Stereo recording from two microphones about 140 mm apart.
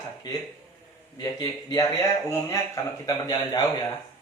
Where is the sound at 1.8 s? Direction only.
20° left (ahead or behind).